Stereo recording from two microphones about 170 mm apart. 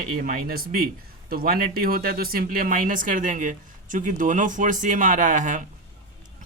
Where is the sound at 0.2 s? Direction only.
60° right (ahead or behind).